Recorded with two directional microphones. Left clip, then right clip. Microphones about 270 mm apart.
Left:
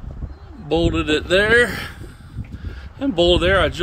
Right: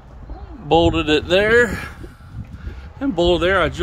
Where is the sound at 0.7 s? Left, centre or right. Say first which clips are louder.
Right 4 dB; centre.